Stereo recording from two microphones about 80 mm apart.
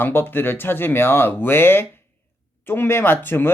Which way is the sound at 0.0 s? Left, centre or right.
Left.